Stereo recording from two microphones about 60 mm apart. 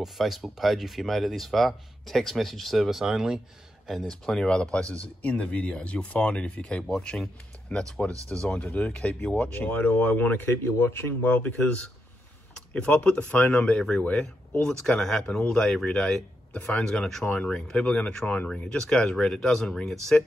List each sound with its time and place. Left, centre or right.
0.0 s speech: centre; by 11.3 s left
11.4 s speech: left
16.8 s speech: centre